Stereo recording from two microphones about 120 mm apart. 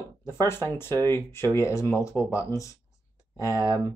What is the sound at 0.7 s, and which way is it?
Speech, 20° left (ahead or behind).